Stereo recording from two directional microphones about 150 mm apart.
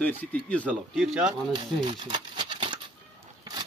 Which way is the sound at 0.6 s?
5° right (ahead or behind).